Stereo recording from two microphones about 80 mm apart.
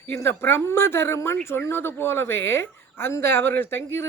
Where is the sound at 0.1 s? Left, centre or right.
Left.